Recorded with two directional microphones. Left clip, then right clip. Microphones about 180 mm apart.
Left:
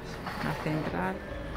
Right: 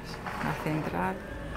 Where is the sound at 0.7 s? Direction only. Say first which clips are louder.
Left 1 dB; 10° right (ahead or behind).